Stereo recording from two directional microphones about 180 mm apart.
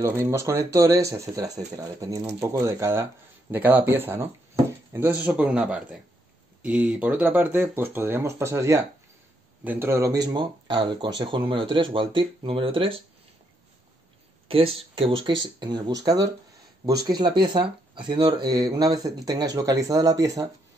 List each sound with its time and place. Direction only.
0.0 s speech: 15° right (ahead or behind); by 13.0 s 30° right (ahead or behind)
14.5 s speech: 30° right (ahead or behind)